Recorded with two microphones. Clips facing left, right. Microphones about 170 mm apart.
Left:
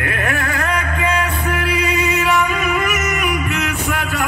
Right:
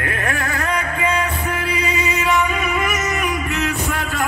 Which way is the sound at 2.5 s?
25° right (ahead or behind).